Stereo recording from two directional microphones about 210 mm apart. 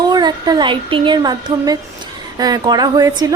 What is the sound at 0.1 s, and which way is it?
A woman's voice, 20° right (ahead or behind).